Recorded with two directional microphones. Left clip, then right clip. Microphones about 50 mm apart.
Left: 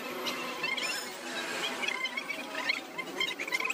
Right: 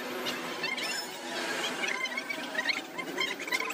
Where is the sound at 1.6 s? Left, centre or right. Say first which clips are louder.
Left 1 dB; centre.